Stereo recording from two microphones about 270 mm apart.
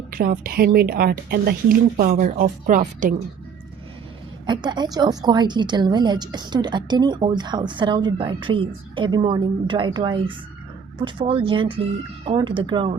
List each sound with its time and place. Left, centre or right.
0.1 s a woman's voice: right
4.4 s a woman's voice: centre